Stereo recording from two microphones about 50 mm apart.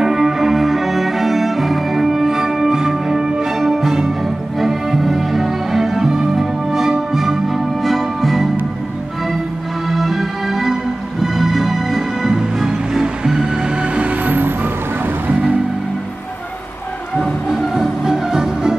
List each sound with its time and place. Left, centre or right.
0.0 s music: centre
9.8 s music: centre; by 14.1 s right
14.2 s music: right
17.2 s music: centre